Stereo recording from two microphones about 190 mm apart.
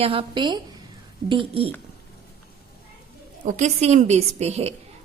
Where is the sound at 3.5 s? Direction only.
35° right (ahead or behind).